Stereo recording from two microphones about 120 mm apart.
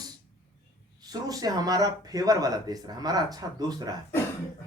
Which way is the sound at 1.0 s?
35° right (ahead or behind).